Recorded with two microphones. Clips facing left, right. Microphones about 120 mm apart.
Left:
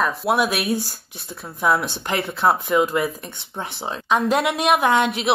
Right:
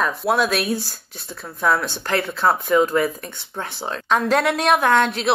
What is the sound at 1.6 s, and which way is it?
Speech, 10° left (ahead or behind).